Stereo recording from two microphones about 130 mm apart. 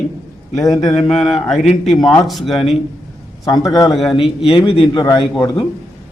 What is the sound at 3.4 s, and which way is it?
Speech, 25° left (ahead or behind).